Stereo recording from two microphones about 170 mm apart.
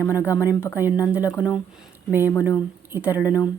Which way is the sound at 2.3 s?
15° left (ahead or behind).